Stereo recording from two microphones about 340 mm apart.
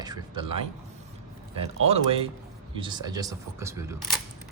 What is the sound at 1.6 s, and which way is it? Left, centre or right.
Speech, centre.